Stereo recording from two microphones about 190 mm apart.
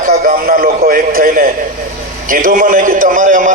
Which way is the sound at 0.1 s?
50° right (ahead or behind).